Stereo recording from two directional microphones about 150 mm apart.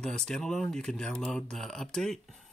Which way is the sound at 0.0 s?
5° left (ahead or behind).